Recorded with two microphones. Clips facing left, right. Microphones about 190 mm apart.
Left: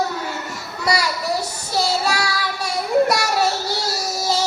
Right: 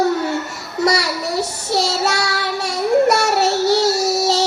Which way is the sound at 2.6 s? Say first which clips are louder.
Right 3 dB; 75° right (ahead or behind).